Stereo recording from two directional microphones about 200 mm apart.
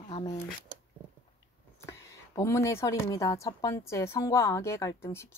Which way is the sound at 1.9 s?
15° left (ahead or behind).